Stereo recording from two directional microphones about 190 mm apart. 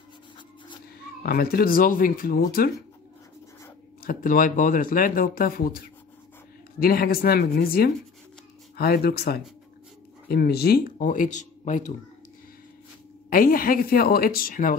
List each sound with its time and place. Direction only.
1.2 s speech: 50° left (ahead or behind)
4.0 s speech: 50° left (ahead or behind)
13.3 s speech: 50° left (ahead or behind)